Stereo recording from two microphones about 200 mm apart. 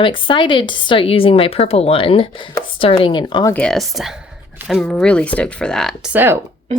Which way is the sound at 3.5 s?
5° left (ahead or behind).